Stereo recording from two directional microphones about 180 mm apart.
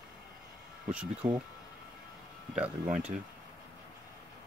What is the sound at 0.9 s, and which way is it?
Speech, 5° right (ahead or behind).